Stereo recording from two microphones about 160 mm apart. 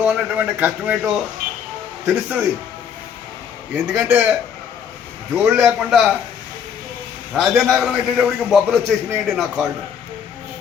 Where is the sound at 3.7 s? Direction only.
10° right (ahead or behind).